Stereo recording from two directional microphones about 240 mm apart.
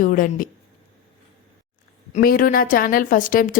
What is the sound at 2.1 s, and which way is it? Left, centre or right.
A woman's voice, left.